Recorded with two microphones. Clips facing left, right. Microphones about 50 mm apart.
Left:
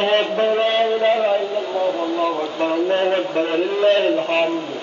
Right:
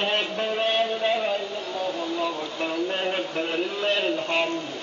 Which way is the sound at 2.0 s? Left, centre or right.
Centre.